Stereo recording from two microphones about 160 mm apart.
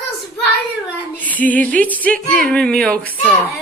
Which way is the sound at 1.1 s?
10° left (ahead or behind).